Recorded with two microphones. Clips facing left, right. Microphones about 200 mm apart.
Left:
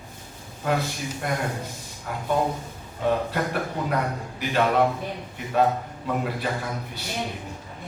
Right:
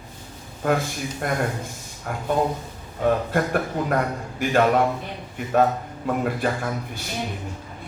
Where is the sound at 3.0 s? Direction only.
50° right (ahead or behind).